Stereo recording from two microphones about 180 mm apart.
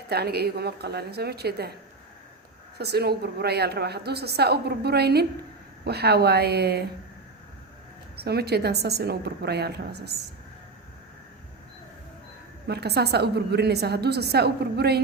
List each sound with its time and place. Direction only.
0.1 s a woman's voice: 60° right (ahead or behind)
2.7 s a woman's voice: 65° right (ahead or behind)
8.1 s a woman's voice: 65° right (ahead or behind)
12.6 s a woman's voice: 65° right (ahead or behind)